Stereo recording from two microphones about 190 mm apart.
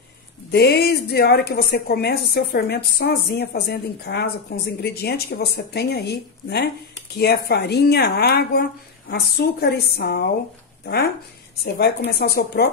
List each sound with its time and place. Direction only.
0.5 s a woman's voice: 60° left (ahead or behind)
11.6 s a woman's voice: 55° left (ahead or behind)